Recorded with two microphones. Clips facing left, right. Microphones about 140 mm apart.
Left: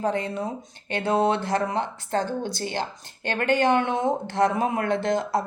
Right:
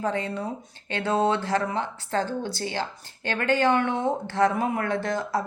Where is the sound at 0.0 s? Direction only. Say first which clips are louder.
Left 2 dB; 15° left (ahead or behind).